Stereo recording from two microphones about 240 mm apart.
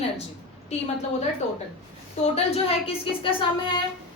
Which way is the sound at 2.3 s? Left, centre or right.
Left.